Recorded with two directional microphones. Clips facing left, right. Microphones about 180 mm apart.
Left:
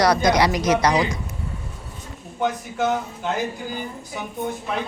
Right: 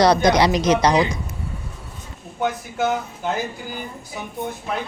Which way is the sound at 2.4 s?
5° right (ahead or behind).